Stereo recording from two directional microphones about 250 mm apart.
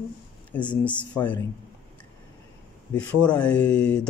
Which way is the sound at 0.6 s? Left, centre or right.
Centre.